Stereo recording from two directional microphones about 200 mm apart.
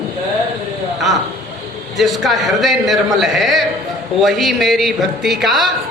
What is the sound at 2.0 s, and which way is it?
A man's voice, centre (ahead or behind).